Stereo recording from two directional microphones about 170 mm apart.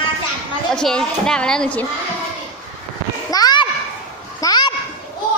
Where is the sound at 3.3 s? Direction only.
25° left (ahead or behind).